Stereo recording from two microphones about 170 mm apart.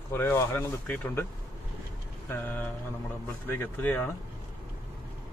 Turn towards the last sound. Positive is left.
turn(degrees=10)  # may be behind; listen again after turning